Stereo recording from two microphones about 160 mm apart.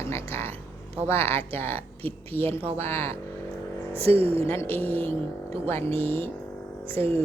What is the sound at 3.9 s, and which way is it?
Speech, 35° right (ahead or behind).